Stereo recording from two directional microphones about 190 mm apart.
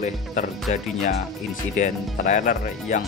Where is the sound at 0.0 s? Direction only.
40° left (ahead or behind).